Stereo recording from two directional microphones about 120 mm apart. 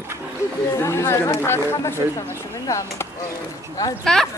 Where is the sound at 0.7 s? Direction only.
25° left (ahead or behind).